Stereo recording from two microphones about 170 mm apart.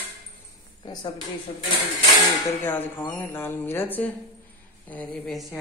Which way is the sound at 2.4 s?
20° left (ahead or behind).